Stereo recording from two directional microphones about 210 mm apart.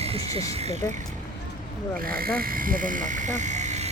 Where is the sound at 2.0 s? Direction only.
45° right (ahead or behind).